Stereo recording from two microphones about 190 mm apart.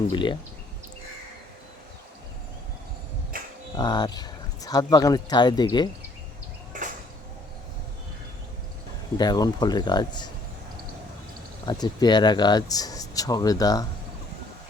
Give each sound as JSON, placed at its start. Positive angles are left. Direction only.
{"t": 0.1, "sound": "speech", "side_deg": 25}
{"t": 3.8, "sound": "speech", "side_deg": 20}
{"t": 6.7, "sound": "sliding door", "side_deg": -40}
{"t": 9.1, "sound": "speech", "side_deg": 20}
{"t": 11.6, "sound": "speech", "side_deg": 20}